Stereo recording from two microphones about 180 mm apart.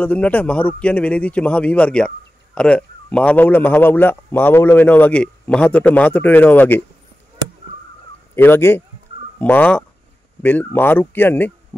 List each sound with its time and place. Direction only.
0.0 s a man's voice: 10° left (ahead or behind)
8.4 s a man's voice: 10° left (ahead or behind)